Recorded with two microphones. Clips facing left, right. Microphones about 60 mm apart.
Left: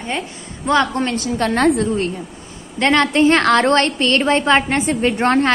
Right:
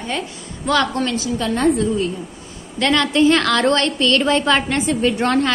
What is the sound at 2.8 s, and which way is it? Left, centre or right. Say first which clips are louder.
A woman's voice: left 2 dB; left.